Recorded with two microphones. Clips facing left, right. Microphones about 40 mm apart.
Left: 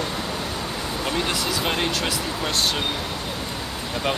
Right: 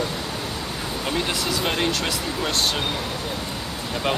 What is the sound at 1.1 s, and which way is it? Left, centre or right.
Speech, centre.